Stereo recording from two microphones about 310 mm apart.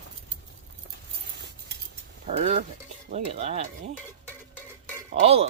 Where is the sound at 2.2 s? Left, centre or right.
Right.